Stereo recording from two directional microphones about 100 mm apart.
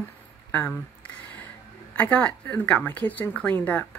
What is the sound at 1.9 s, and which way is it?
Speech, 15° left (ahead or behind).